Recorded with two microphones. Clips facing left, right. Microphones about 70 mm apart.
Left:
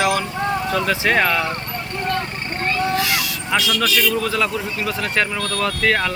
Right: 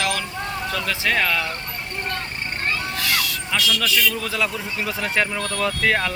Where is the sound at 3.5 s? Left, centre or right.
Centre.